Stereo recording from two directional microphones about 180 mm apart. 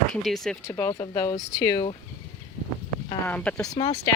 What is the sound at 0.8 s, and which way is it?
Speech, 15° left (ahead or behind).